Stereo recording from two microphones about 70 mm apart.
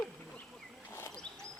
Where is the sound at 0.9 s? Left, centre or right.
Left.